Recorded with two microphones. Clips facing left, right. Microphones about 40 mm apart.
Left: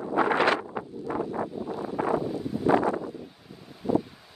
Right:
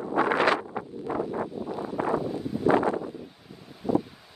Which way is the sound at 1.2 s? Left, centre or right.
Centre.